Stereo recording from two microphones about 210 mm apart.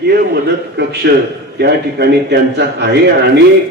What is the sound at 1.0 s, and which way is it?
A man's voice, 55° right (ahead or behind).